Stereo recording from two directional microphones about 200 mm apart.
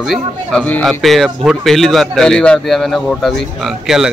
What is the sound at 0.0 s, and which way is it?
Speech, centre (ahead or behind).